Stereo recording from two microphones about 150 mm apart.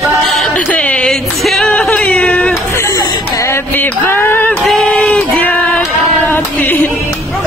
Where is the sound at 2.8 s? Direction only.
20° left (ahead or behind).